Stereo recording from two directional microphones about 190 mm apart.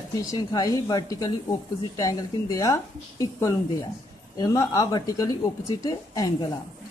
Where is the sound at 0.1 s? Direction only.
20° left (ahead or behind).